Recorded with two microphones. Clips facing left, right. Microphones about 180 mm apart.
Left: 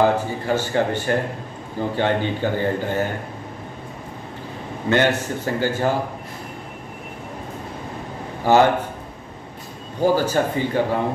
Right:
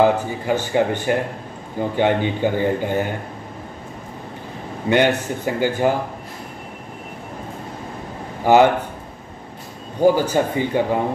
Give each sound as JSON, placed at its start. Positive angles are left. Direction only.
{"t": 0.0, "sound": "a man's voice", "side_deg": -15}
{"t": 4.8, "sound": "a man's voice", "side_deg": -15}
{"t": 8.5, "sound": "a man's voice", "side_deg": -15}
{"t": 10.1, "sound": "a man's voice", "side_deg": -15}